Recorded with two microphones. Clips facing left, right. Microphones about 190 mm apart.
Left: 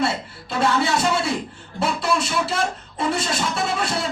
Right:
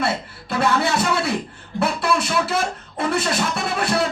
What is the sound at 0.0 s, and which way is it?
Music, 60° right (ahead or behind).